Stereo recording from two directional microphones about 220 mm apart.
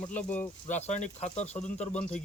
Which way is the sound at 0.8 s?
30° left (ahead or behind).